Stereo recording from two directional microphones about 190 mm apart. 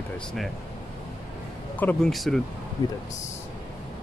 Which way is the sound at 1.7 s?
10° left (ahead or behind).